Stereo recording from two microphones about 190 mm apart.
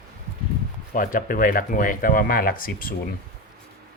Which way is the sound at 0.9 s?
45° left (ahead or behind).